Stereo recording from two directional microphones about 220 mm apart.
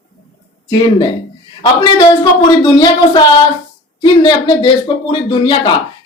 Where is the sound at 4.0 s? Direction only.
20° left (ahead or behind).